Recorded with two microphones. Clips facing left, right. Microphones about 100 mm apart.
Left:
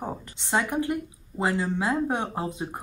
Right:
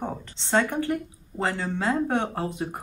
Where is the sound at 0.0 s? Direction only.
10° left (ahead or behind).